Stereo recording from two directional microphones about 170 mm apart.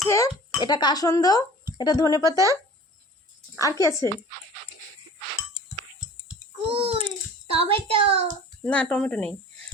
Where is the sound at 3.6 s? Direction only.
20° left (ahead or behind).